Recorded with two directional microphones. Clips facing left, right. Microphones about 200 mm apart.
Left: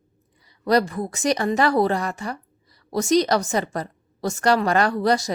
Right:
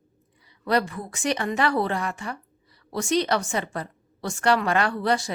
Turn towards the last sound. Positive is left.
turn(degrees=40)  # may be behind; listen again after turning